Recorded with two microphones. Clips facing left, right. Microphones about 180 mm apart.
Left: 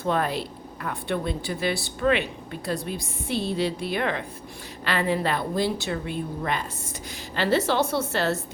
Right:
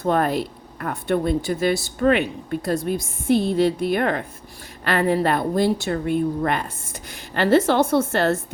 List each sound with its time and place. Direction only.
0.0 s speech: 50° right (ahead or behind)